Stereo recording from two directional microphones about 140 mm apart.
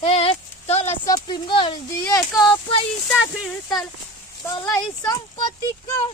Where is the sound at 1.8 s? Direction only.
25° left (ahead or behind).